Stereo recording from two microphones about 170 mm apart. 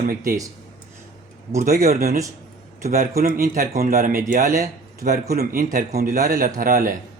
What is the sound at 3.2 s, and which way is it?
Speech, 60° right (ahead or behind).